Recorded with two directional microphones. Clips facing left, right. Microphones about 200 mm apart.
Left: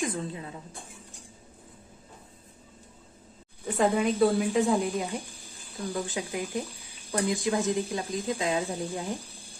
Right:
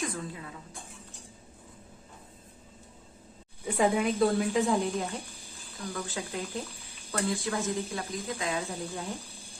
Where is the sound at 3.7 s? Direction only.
5° right (ahead or behind).